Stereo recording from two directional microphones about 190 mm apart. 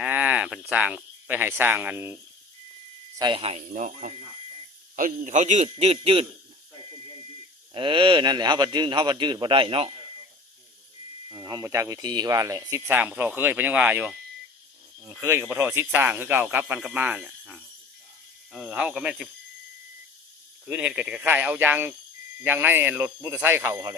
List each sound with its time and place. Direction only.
0.0 s speech: 10° right (ahead or behind)
3.2 s a man's voice: 25° right (ahead or behind)
7.7 s speech: 25° right (ahead or behind)
11.3 s speech: 20° right (ahead or behind); by 19.3 s 5° right (ahead or behind)
20.7 s speech: 5° right (ahead or behind)